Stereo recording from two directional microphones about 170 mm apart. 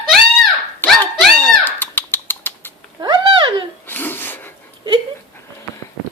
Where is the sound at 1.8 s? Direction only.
10° left (ahead or behind).